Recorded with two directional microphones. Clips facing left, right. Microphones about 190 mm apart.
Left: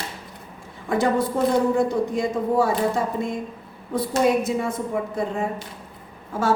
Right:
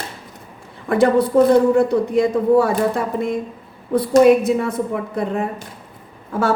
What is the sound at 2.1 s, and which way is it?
Speech, 60° right (ahead or behind).